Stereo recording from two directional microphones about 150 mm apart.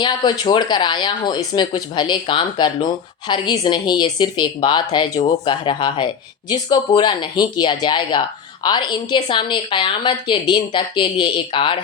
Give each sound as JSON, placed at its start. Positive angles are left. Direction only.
{"t": 0.0, "sound": "a woman's voice", "side_deg": 30}